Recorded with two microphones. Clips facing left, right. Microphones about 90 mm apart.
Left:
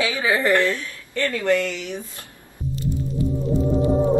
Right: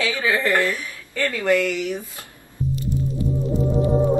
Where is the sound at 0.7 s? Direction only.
15° right (ahead or behind).